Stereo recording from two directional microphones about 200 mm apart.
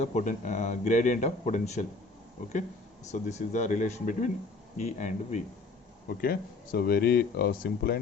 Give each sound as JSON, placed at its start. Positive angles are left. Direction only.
{"t": 0.0, "sound": "speech", "side_deg": 35}
{"t": 3.1, "sound": "speech", "side_deg": 35}
{"t": 6.2, "sound": "speech", "side_deg": 50}